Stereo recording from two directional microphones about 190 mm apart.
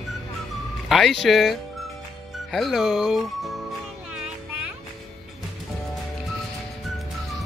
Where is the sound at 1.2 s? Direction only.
Centre (ahead or behind).